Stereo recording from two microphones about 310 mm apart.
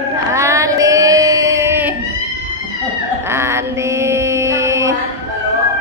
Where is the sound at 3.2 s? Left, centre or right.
Centre.